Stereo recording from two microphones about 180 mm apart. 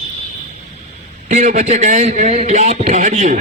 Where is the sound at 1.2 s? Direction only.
40° right (ahead or behind).